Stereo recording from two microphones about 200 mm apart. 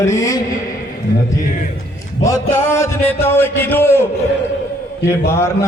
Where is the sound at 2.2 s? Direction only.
15° left (ahead or behind).